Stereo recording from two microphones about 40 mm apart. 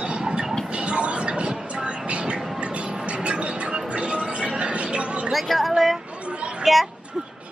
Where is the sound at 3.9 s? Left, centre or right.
Right.